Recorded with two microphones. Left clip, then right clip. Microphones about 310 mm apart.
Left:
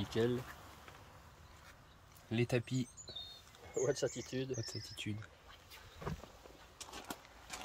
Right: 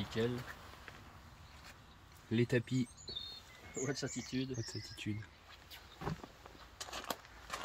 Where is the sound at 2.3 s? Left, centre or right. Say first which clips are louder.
Right 2 dB; centre.